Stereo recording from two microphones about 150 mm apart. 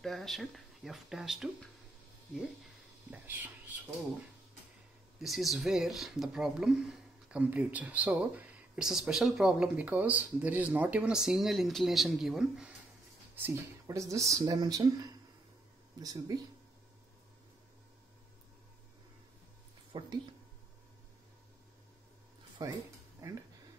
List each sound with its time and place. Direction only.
0.0 s speech: centre (ahead or behind)
5.2 s speech: centre (ahead or behind)
13.4 s speech: 20° right (ahead or behind)
19.9 s a sound: 30° right (ahead or behind)
22.6 s speech: 25° right (ahead or behind)
23.2 s a sound: 20° right (ahead or behind)